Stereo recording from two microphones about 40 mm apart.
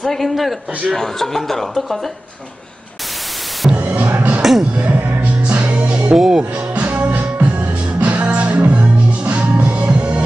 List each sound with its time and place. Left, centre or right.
0.0 s a man's voice: centre
3.7 s music: right
4.4 s music: centre
4.7 s music: right
6.1 s speech: centre
6.7 s music: right